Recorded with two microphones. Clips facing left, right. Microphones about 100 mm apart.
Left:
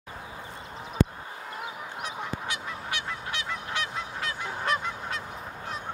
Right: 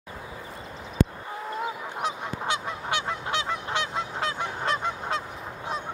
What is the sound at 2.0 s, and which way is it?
Honk, 25° right (ahead or behind).